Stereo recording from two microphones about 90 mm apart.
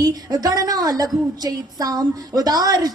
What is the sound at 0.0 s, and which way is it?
A woman's voice, 45° right (ahead or behind).